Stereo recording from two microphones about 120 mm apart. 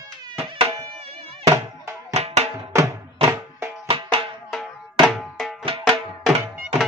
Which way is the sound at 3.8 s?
50° right (ahead or behind).